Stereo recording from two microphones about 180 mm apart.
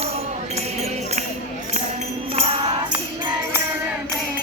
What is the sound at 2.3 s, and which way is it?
Music, 35° right (ahead or behind).